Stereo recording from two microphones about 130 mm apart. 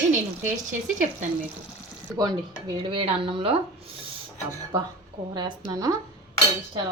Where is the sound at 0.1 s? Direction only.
75° right (ahead or behind).